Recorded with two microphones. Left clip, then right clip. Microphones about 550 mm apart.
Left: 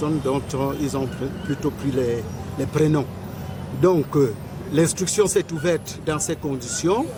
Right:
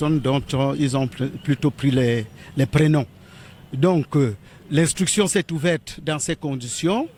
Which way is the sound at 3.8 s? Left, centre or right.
Right.